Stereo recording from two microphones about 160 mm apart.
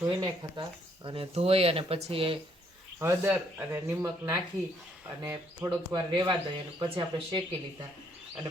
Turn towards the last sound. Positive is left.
turn(degrees=-30)  # may be behind; listen again after turning